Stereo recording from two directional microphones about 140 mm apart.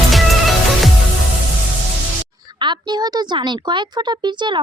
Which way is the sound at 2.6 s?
30° right (ahead or behind).